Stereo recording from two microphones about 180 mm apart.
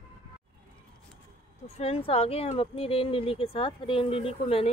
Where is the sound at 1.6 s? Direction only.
35° left (ahead or behind).